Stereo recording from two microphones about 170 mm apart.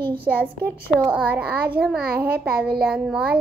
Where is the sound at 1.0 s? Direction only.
10° right (ahead or behind).